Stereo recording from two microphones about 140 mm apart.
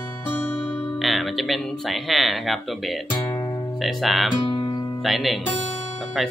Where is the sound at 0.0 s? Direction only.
15° left (ahead or behind).